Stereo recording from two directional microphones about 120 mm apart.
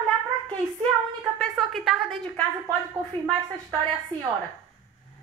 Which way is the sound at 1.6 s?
Centre (ahead or behind).